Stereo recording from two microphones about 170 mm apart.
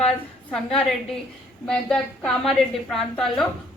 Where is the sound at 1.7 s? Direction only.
5° left (ahead or behind).